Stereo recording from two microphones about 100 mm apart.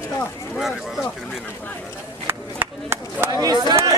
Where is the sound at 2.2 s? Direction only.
25° right (ahead or behind).